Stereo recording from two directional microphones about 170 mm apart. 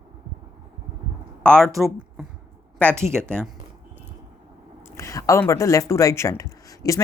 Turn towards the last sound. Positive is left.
turn(degrees=20)  # may be behind; listen again after turning